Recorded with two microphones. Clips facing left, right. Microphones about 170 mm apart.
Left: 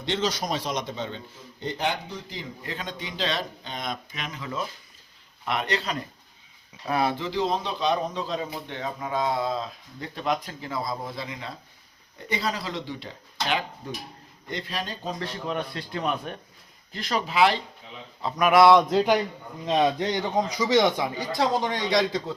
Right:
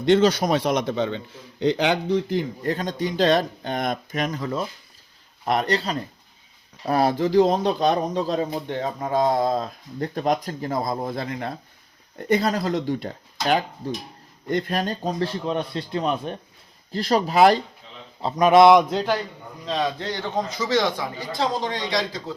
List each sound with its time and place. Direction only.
0.0 s a man's voice: 55° right (ahead or behind)
15.2 s speech: 30° right (ahead or behind)
16.9 s speech: 35° right (ahead or behind)
18.2 s speech: 25° right (ahead or behind)
19.6 s a man's voice: 20° left (ahead or behind)